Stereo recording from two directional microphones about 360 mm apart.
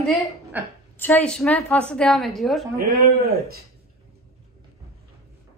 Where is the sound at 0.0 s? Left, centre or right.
Centre.